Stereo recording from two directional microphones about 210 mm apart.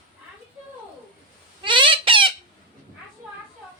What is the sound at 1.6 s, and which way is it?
Squawk, 25° right (ahead or behind).